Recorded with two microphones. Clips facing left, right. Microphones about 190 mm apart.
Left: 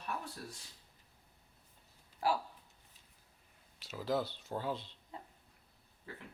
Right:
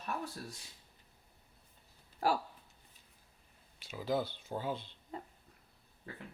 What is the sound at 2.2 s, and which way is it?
Speech, 45° right (ahead or behind).